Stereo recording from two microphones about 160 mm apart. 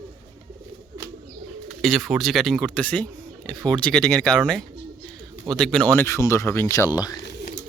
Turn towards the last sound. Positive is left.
turn(degrees=25)  # may be behind; listen again after turning